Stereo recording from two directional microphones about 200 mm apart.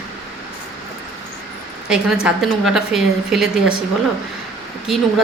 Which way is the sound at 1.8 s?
5° right (ahead or behind).